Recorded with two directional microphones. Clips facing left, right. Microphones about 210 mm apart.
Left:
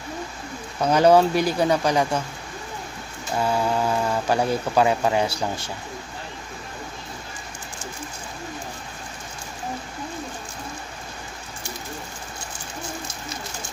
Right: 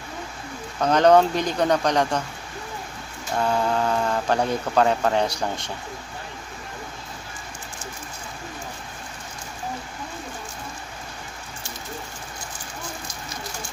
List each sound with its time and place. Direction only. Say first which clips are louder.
0.7 s speech: even; 10° left (ahead or behind)
3.3 s speech: even; 5° left (ahead or behind)